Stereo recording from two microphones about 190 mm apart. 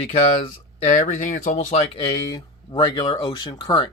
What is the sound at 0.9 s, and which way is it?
Speech, 40° left (ahead or behind).